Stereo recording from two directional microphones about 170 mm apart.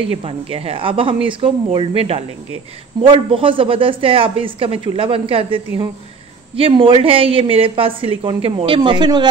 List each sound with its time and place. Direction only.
0.2 s speech: 35° right (ahead or behind)